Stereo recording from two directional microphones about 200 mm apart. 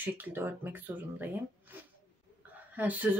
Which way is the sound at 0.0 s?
10° right (ahead or behind).